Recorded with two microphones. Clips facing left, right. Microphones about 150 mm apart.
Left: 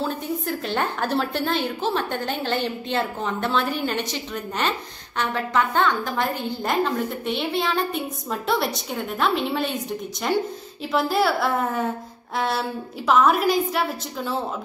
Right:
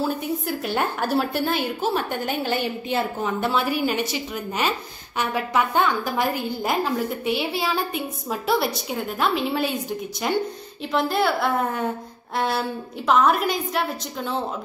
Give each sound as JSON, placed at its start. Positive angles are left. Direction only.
{"t": 0.0, "sound": "a woman's voice", "side_deg": -5}